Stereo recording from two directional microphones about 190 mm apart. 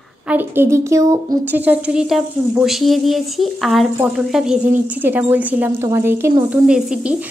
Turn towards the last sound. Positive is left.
turn(degrees=-5)  # may be behind; listen again after turning